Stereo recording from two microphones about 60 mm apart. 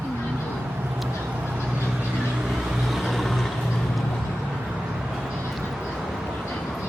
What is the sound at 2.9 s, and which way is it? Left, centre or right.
Vehicle, centre.